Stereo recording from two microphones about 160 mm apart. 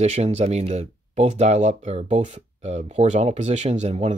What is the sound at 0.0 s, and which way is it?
Speech, 45° right (ahead or behind).